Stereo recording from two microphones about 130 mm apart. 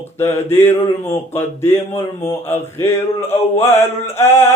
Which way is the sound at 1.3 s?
20° left (ahead or behind).